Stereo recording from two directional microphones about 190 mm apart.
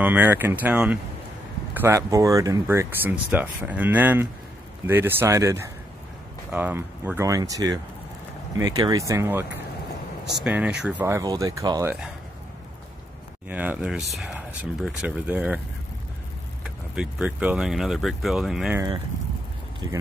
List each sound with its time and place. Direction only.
0.0 s speech: 10° right (ahead or behind)
11.1 s speech: 15° right (ahead or behind)
13.5 s speech: 10° right (ahead or behind)
16.6 s speech: 5° right (ahead or behind)
19.8 s speech: 25° right (ahead or behind)